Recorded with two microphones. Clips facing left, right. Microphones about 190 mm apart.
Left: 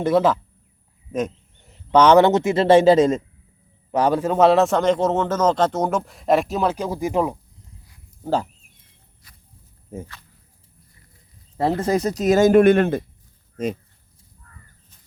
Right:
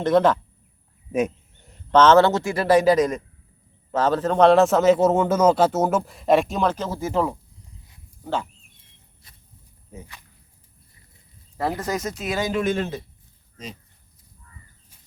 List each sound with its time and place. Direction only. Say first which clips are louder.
0.0 s a man's voice: even; 5° left (ahead or behind)
1.6 s a sound: left 1 dB; centre (ahead or behind)
2.0 s speech: left 2 dB; 15° left (ahead or behind)
3.9 s a man's voice: left 1 dB; 10° left (ahead or behind)
8.2 s speech: left 5 dB; 35° left (ahead or behind)
9.9 s speech: left 8 dB; 45° left (ahead or behind)
11.8 s speech: left 7 dB; 30° left (ahead or behind); by 13.7 s 50° left (ahead or behind)